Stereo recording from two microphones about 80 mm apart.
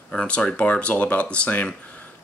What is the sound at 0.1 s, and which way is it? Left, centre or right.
Speech, centre.